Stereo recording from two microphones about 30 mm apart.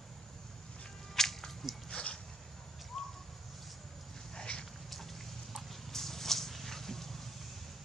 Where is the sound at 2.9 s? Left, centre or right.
Centre.